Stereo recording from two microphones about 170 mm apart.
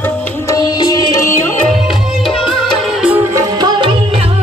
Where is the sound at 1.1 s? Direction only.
15° left (ahead or behind).